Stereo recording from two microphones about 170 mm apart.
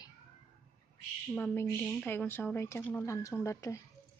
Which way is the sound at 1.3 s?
10° left (ahead or behind).